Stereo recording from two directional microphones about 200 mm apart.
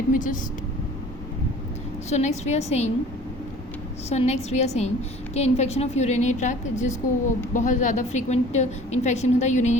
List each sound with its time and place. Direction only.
0.1 s a woman's voice: 40° left (ahead or behind)
2.0 s a woman's voice: 35° left (ahead or behind)
4.1 s a woman's voice: 35° left (ahead or behind)